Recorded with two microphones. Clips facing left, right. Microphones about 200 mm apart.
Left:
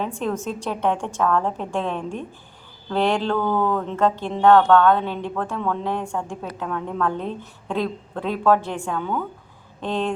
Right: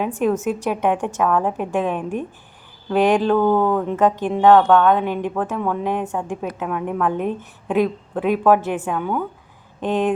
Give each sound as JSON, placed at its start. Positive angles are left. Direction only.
{"t": 0.4, "sound": "speech", "side_deg": -10}